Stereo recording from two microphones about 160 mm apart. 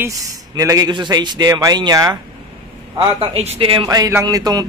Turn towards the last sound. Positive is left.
turn(degrees=-20)  # may be behind; listen again after turning